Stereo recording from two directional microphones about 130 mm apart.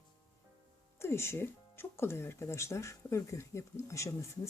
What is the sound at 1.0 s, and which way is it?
Speech, 20° left (ahead or behind).